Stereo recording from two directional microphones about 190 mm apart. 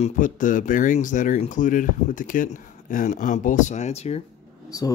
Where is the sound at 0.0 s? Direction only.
45° left (ahead or behind).